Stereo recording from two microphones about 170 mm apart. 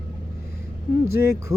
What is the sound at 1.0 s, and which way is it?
Music, 15° right (ahead or behind).